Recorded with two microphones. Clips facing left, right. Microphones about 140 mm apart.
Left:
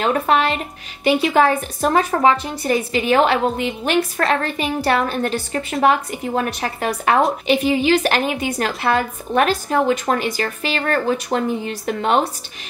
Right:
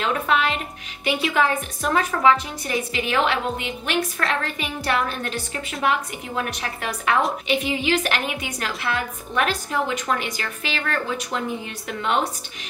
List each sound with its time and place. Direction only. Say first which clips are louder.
0.0 s a woman's voice: left 5 dB; 40° left (ahead or behind)
8.5 s a woman's voice: left 7 dB; 50° left (ahead or behind)